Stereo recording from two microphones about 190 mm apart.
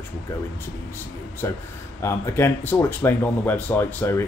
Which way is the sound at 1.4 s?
15° left (ahead or behind).